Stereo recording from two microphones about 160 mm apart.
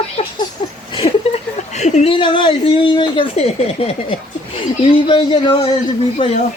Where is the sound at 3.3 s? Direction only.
40° left (ahead or behind).